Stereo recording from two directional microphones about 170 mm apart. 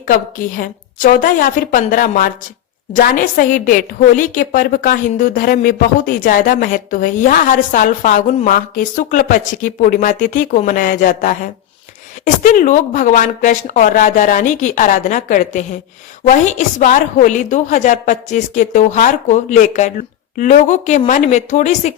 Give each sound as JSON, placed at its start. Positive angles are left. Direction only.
{"t": 0.1, "sound": "a woman's voice", "side_deg": 55}